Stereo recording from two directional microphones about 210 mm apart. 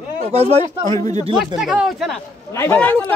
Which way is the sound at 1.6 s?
Centre (ahead or behind).